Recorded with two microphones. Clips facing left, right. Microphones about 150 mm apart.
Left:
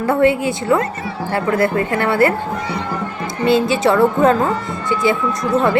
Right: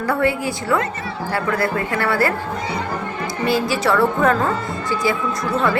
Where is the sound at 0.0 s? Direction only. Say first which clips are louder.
Left 5 dB; 25° left (ahead or behind).